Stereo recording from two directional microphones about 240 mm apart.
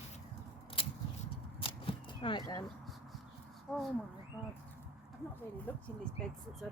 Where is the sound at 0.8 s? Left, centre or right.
Left.